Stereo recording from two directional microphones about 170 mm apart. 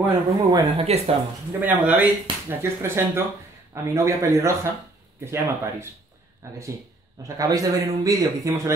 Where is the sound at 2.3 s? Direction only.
30° right (ahead or behind).